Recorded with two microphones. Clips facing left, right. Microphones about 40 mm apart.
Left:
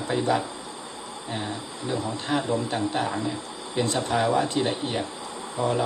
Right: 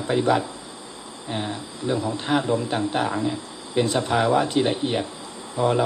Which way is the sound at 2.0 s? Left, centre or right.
Right.